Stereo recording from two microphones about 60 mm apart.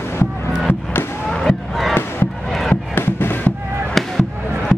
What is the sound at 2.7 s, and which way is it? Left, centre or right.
Crowd, left.